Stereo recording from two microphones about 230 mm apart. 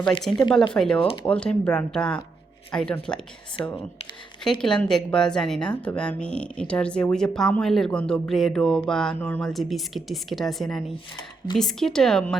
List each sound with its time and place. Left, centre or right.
0.2 s a woman's voice: centre
0.9 s speech: left
1.3 s a woman's voice: centre
4.6 s a woman's voice: centre